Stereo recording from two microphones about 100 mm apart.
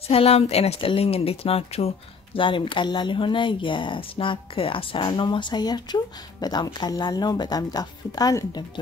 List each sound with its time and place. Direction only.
0.1 s speech: 85° left
2.3 s speech: 55° left (ahead or behind); by 8.6 s 35° left (ahead or behind)